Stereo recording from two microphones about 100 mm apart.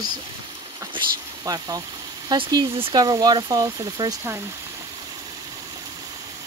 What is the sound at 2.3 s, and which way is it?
Speech, 60° right (ahead or behind).